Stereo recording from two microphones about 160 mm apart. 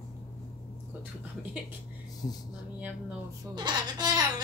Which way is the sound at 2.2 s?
25° left (ahead or behind).